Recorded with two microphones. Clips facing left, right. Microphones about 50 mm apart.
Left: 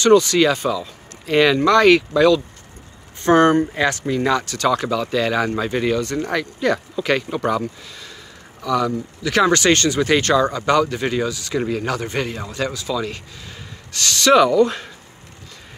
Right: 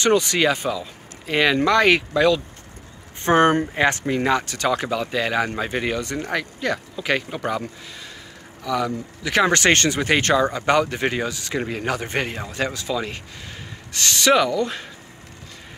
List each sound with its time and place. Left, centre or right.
0.0 s speech: right
6.2 s speech: centre
8.6 s speech: centre
14.6 s speech: centre